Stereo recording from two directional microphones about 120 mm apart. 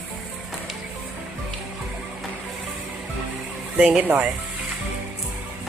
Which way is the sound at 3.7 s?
10° right (ahead or behind).